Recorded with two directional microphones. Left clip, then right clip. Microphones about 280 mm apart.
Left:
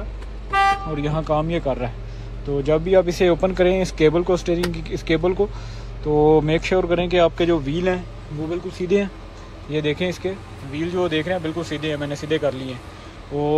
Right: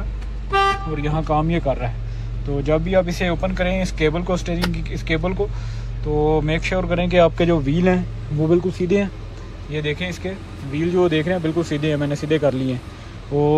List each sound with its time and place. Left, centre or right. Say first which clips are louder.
0.8 s speech: even; centre